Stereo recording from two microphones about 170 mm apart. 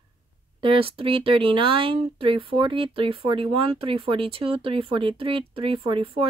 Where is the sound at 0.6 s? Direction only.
30° right (ahead or behind).